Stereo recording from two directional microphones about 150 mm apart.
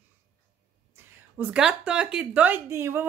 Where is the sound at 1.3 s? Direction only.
5° right (ahead or behind).